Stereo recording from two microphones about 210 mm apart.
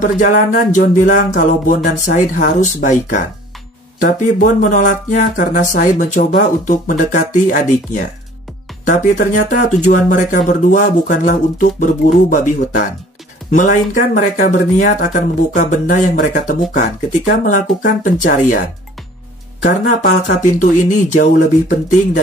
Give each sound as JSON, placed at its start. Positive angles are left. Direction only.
{"t": 0.0, "sound": "speech", "side_deg": 40}
{"t": 19.6, "sound": "speech", "side_deg": 40}